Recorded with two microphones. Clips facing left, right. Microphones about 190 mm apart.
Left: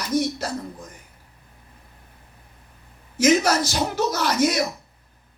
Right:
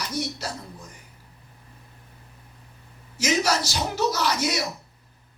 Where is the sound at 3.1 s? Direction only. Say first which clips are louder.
Left 6 dB; 55° left (ahead or behind).